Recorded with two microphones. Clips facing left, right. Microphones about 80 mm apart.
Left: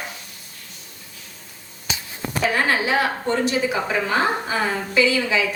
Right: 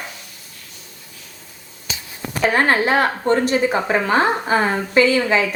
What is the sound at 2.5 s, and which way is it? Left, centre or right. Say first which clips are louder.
A woman's voice: right 5 dB; right.